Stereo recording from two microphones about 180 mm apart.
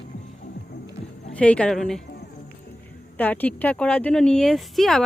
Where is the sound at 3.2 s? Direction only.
10° left (ahead or behind).